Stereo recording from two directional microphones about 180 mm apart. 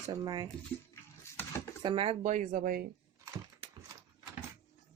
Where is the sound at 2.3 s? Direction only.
45° right (ahead or behind).